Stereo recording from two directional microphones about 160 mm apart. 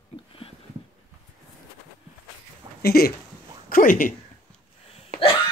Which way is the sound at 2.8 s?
70° left (ahead or behind).